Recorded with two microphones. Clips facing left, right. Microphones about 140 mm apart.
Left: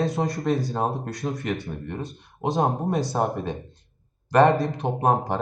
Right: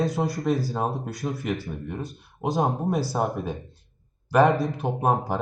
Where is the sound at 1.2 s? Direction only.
20° left (ahead or behind).